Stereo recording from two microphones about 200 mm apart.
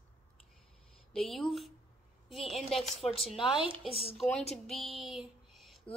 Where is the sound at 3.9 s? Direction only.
30° left (ahead or behind).